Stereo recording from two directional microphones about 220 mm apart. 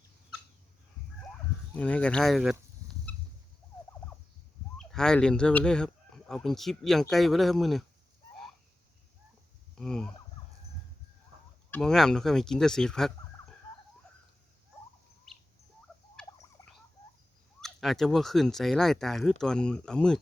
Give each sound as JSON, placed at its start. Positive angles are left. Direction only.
{"t": 1.7, "sound": "speech", "side_deg": 5}
{"t": 3.1, "sound": "fowl", "side_deg": 5}
{"t": 4.8, "sound": "speech", "side_deg": 0}
{"t": 9.7, "sound": "speech", "side_deg": 0}
{"t": 11.7, "sound": "speech", "side_deg": 0}
{"t": 16.2, "sound": "a sound", "side_deg": 0}
{"t": 16.6, "sound": "a sound", "side_deg": 15}
{"t": 17.6, "sound": "speech", "side_deg": 0}